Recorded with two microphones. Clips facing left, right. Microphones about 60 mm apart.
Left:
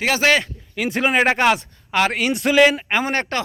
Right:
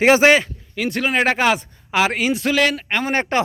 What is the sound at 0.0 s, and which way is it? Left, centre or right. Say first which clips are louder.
Speech: right 5 dB; right.